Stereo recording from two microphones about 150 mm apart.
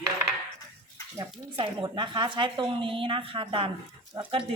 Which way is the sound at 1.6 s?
30° right (ahead or behind).